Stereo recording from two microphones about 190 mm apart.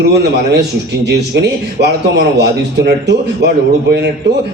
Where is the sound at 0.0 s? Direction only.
60° right (ahead or behind).